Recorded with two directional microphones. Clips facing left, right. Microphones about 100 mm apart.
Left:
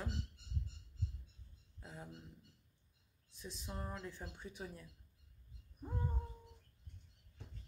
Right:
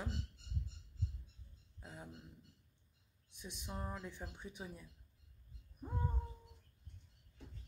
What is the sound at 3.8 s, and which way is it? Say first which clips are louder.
Speech: even; 5° right (ahead or behind).